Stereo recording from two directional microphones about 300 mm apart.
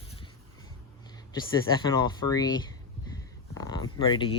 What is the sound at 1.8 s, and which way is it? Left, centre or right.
Speech, centre.